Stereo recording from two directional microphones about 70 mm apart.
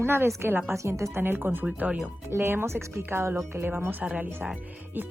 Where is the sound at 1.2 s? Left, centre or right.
Right.